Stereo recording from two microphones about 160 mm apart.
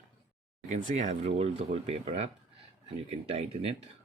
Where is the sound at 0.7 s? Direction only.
45° right (ahead or behind).